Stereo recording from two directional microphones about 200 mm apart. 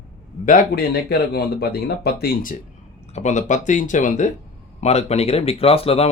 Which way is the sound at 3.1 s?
35° left (ahead or behind).